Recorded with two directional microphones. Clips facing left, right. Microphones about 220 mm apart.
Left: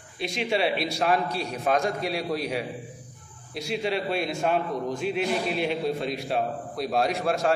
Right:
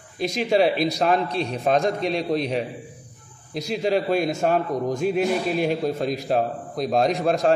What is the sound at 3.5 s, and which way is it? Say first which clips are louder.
A man's voice: right 5 dB; 40° right (ahead or behind).